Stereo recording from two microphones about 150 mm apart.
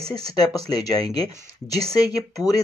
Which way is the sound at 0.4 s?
25° left (ahead or behind).